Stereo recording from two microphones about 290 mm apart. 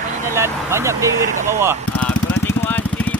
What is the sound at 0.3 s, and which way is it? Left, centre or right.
Speech, centre.